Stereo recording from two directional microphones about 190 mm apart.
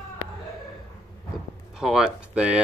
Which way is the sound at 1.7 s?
5° right (ahead or behind).